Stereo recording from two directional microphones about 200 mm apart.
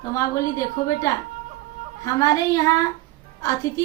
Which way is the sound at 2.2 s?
15° left (ahead or behind).